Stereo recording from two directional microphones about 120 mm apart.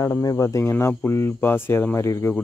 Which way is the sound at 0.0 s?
30° left (ahead or behind).